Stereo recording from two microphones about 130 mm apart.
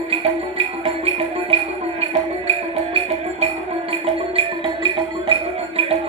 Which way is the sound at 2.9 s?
50° right (ahead or behind).